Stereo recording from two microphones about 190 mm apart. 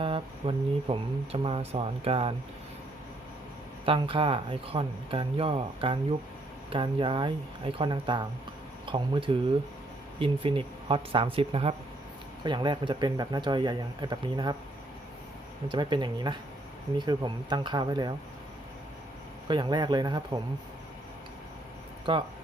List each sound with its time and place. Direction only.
0.0 s speech: 25° right (ahead or behind)
3.8 s speech: 25° right (ahead or behind)
15.7 s speech: 25° right (ahead or behind)
19.5 s speech: 25° right (ahead or behind)
22.1 s speech: 25° right (ahead or behind)